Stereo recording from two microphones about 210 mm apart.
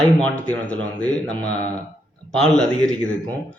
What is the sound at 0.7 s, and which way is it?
Speech, 5° left (ahead or behind).